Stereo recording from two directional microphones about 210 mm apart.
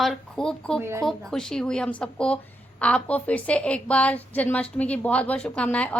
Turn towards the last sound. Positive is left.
turn(degrees=5)  # may be behind; listen again after turning